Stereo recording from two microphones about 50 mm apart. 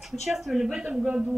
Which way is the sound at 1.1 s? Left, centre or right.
Centre.